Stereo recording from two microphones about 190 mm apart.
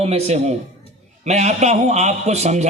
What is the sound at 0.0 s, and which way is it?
A man's voice, 35° right (ahead or behind).